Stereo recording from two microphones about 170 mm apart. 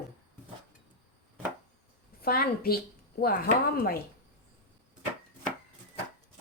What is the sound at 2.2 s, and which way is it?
Speech, 60° left (ahead or behind).